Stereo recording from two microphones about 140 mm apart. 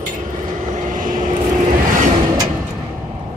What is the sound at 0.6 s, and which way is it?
Vehicle, 60° right (ahead or behind).